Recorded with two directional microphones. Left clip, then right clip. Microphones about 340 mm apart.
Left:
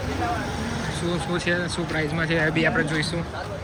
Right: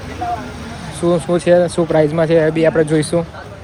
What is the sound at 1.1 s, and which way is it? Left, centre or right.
Speech, centre.